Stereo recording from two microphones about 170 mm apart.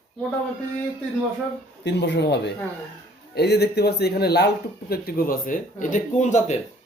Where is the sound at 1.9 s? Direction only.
85° left.